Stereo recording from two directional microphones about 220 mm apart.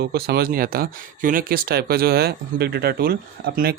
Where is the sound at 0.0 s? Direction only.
45° right (ahead or behind).